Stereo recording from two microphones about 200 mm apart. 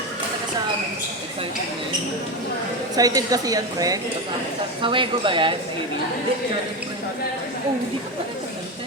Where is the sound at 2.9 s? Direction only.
20° right (ahead or behind).